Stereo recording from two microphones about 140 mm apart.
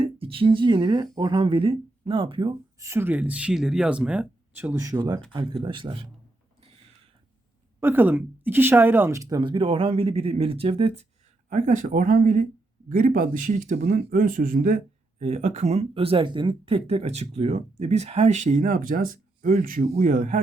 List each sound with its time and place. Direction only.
0.0 s speech: 40° right (ahead or behind); by 5.2 s 25° right (ahead or behind)
5.3 s speech: 35° right (ahead or behind)
7.8 s a woman's voice: 15° right (ahead or behind)
9.4 s speech: 35° right (ahead or behind)
11.4 s speech: 65° right (ahead or behind)
15.2 s speech: 55° right (ahead or behind); by 19.9 s 75° right (ahead or behind)
19.9 s speech: 65° right (ahead or behind)